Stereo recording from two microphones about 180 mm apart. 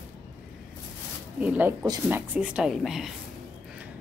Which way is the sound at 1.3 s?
10° right (ahead or behind).